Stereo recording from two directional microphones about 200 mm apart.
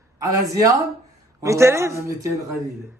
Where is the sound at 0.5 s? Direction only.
15° right (ahead or behind).